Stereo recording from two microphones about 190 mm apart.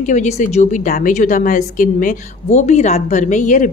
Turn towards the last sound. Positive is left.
turn(degrees=40)  # may be behind; listen again after turning